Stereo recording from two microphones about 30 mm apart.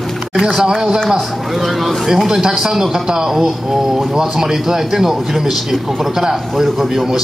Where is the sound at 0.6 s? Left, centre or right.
Right.